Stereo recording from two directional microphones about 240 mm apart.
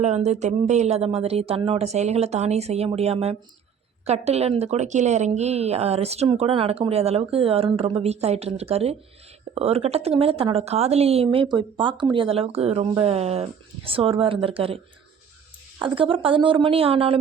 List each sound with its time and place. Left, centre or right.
0.0 s a woman's voice: right
15.8 s a woman's voice: right